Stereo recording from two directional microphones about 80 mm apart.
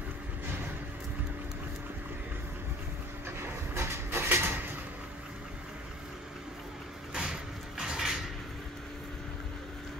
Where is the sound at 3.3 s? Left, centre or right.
Right.